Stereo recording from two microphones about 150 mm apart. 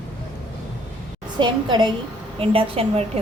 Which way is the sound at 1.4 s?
30° right (ahead or behind).